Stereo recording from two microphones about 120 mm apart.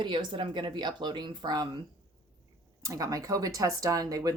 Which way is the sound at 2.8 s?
30° right (ahead or behind).